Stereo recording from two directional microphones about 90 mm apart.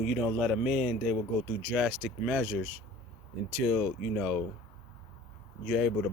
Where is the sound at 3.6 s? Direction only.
Centre (ahead or behind).